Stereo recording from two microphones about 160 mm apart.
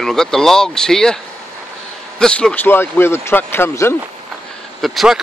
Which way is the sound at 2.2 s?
5° left (ahead or behind).